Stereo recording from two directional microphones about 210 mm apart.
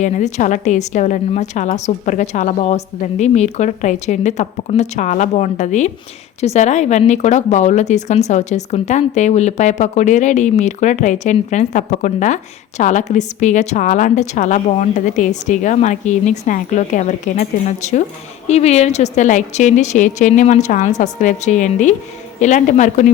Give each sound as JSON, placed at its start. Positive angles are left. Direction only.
{"t": 0.0, "sound": "a woman's voice", "side_deg": 35}